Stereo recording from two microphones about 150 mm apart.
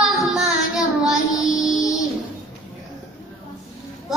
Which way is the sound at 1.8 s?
20° left (ahead or behind).